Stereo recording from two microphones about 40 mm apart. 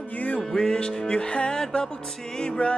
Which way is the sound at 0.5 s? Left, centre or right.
Centre.